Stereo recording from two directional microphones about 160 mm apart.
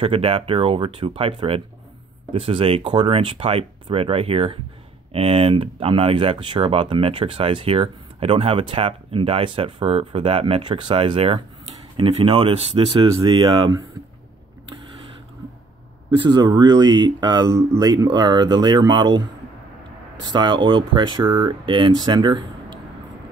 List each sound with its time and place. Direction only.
0.0 s speech: 35° right (ahead or behind)
16.2 s speech: 25° right (ahead or behind)
20.3 s speech: 30° right (ahead or behind)